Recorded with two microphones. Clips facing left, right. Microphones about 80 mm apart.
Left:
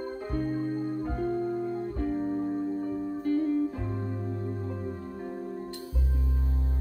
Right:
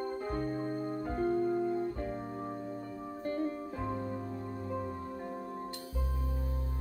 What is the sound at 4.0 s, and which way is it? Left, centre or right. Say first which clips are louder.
Music: left 2 dB; left.